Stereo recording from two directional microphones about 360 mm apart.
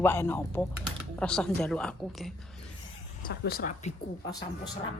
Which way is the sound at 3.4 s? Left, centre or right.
Left.